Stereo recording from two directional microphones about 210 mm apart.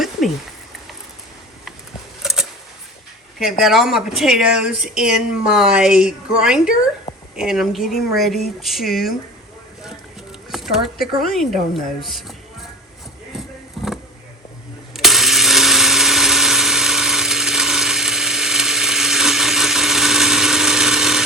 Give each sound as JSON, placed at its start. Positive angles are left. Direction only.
{"t": 2.2, "sound": "vehicle", "side_deg": 0}
{"t": 3.6, "sound": "speech", "side_deg": 0}
{"t": 10.5, "sound": "speech", "side_deg": 0}
{"t": 13.3, "sound": "a sound", "side_deg": 0}
{"t": 13.8, "sound": "vehicle", "side_deg": 0}
{"t": 14.9, "sound": "electric toothbrush", "side_deg": 0}